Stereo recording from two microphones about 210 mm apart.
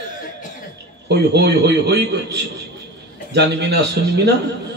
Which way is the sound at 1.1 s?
50° right (ahead or behind).